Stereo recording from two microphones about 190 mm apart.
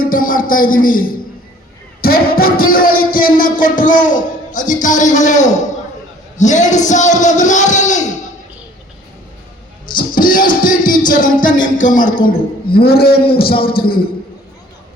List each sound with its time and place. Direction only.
0.0 s a man's voice: 50° left (ahead or behind)
2.0 s a sound: 50° left (ahead or behind)
6.3 s speech: 40° left (ahead or behind)
10.2 s music: 45° left (ahead or behind)
11.1 s a man's voice: 45° left (ahead or behind)